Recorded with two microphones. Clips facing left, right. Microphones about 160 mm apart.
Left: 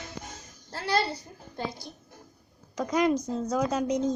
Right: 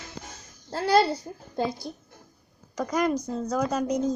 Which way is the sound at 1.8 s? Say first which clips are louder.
Right 8 dB; 40° right (ahead or behind).